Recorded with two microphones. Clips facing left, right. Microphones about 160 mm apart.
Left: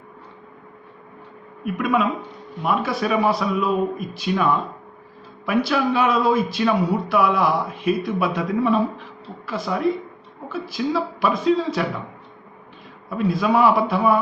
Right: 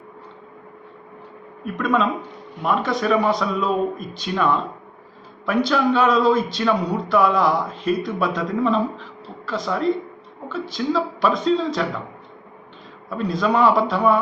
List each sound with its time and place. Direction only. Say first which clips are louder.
1.6 s speech: even; 10° left (ahead or behind)
13.1 s speech: left 1 dB; 10° left (ahead or behind)